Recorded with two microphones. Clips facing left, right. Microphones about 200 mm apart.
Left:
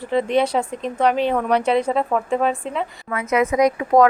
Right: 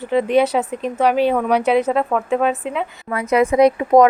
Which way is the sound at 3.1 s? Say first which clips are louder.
Right 3 dB; 35° right (ahead or behind).